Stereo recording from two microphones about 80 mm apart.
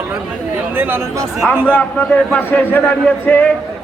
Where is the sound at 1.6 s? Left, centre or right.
Centre.